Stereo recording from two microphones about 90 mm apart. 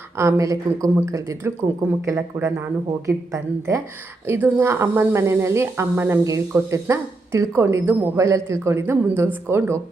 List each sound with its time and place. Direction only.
0.2 s speech: 35° right (ahead or behind)